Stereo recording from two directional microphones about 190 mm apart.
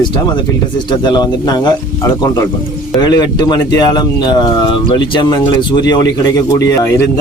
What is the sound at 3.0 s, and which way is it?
Speech, 25° left (ahead or behind).